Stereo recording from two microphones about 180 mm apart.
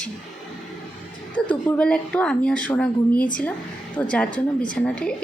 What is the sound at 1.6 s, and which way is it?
A woman's voice, 10° left (ahead or behind).